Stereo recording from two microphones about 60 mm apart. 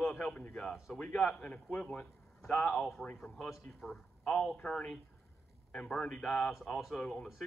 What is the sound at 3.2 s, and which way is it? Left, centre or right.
Speech, centre.